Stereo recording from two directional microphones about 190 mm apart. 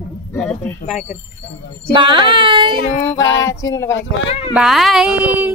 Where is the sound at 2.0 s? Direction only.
25° right (ahead or behind).